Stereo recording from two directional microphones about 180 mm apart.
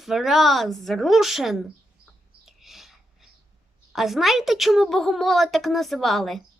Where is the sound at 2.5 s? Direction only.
Centre (ahead or behind).